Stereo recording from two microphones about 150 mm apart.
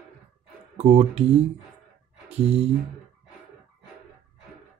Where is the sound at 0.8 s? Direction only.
45° right (ahead or behind).